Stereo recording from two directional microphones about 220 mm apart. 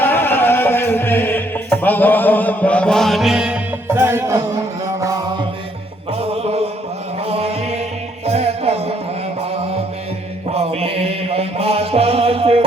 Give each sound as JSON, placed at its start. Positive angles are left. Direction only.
{"t": 0.0, "sound": "music", "side_deg": 10}
{"t": 10.5, "sound": "mantra", "side_deg": -25}